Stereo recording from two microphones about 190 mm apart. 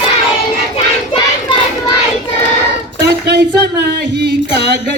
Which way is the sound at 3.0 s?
60° right (ahead or behind).